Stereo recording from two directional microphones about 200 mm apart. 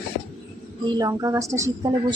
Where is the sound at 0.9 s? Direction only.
15° right (ahead or behind).